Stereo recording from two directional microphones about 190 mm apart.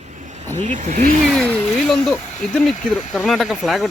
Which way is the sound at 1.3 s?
5° left (ahead or behind).